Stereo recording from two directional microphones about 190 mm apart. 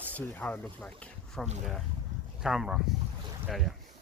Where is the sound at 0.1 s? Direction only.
10° left (ahead or behind).